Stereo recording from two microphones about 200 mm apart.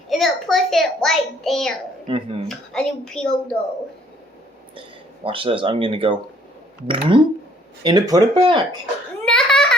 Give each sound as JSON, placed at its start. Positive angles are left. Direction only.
{"t": 0.1, "sound": "a child's voice", "side_deg": 0}
{"t": 2.1, "sound": "speech", "side_deg": -25}
{"t": 2.5, "sound": "a child's voice", "side_deg": 5}
{"t": 5.2, "sound": "speech", "side_deg": -25}
{"t": 9.2, "sound": "a sound", "side_deg": 5}